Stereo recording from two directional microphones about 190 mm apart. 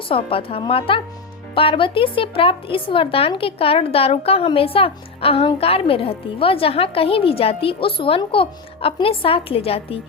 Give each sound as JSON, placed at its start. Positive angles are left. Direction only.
{"t": 0.1, "sound": "speech", "side_deg": 30}